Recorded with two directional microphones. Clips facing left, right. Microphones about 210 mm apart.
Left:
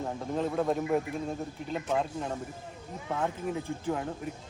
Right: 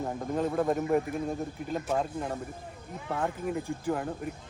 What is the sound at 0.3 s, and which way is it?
Speech, centre (ahead or behind).